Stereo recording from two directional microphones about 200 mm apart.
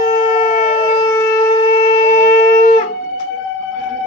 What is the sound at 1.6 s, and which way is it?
Wind instrument, 30° left (ahead or behind).